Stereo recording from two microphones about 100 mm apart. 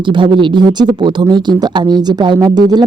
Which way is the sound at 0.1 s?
55° right (ahead or behind).